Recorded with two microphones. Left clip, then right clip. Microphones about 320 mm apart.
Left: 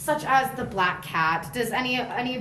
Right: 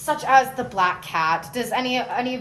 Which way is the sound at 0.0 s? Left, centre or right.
Right.